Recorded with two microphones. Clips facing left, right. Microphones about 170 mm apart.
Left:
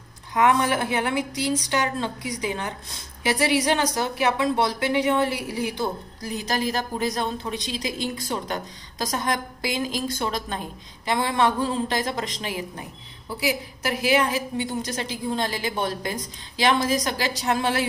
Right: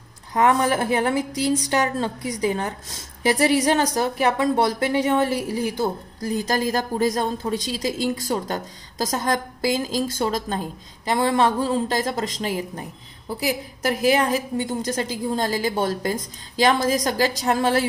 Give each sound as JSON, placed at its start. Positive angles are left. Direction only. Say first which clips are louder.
{"t": 0.3, "sound": "a woman's voice", "louder": "right 2 dB", "side_deg": -40}